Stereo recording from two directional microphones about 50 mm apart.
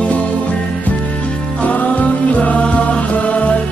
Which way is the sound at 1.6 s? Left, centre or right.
Left.